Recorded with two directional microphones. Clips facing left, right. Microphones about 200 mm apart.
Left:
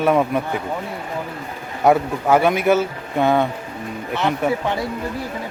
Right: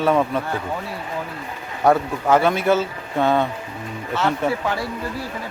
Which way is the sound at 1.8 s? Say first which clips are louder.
Left 2 dB; 10° left (ahead or behind).